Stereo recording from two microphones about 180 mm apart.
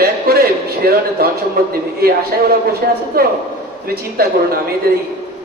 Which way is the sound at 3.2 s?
55° right (ahead or behind).